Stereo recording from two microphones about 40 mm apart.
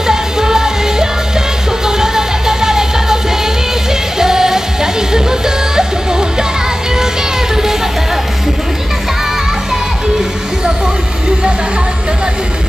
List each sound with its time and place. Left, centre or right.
0.0 s music: centre
4.2 s music: centre
5.8 s music: centre